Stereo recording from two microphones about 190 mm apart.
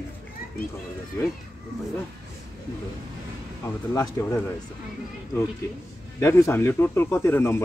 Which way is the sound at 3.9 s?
15° left (ahead or behind).